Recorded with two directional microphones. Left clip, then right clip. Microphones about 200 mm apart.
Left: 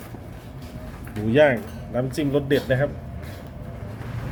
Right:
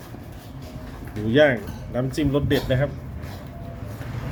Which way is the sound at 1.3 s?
5° left (ahead or behind).